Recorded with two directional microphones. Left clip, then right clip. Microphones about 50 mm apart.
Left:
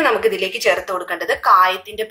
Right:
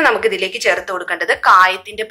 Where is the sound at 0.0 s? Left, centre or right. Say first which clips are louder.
Right 2 dB; right.